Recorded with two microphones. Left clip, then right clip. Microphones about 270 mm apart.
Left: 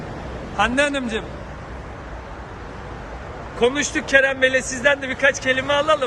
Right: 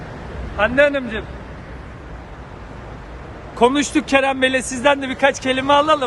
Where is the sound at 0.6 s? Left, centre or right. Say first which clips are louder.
Right 4 dB; centre.